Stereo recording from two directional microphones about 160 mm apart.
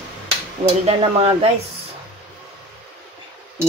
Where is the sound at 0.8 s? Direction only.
35° right (ahead or behind).